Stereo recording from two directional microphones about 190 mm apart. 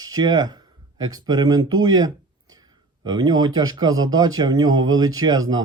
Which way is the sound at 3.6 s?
20° right (ahead or behind).